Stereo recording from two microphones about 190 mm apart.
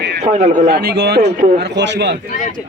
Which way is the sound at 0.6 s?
60° right (ahead or behind).